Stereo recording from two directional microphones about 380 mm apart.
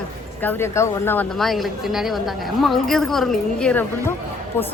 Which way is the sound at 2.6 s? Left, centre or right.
Centre.